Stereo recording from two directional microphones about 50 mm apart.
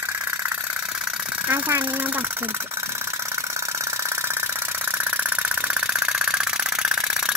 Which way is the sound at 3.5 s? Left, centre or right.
Right.